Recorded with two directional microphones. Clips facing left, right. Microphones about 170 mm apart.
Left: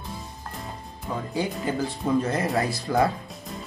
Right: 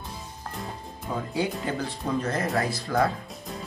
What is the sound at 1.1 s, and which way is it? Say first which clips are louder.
Speech: even; centre (ahead or behind).